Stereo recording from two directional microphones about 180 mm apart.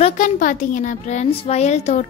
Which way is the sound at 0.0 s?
45° left (ahead or behind).